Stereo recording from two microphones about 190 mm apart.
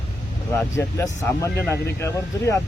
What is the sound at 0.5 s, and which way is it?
Speech, 15° left (ahead or behind).